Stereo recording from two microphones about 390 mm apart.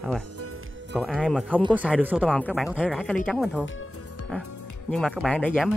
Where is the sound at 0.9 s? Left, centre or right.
Centre.